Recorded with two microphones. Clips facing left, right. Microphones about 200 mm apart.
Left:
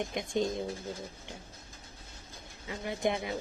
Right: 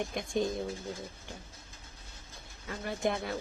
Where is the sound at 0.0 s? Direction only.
20° left (ahead or behind).